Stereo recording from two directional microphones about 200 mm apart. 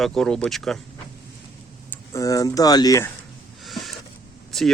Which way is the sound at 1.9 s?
15° left (ahead or behind).